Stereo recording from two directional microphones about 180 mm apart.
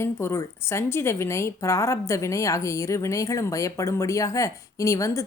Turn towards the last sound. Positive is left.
turn(degrees=15)  # may be behind; listen again after turning